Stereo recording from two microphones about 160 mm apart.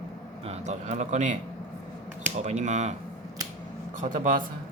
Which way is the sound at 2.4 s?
45° right (ahead or behind).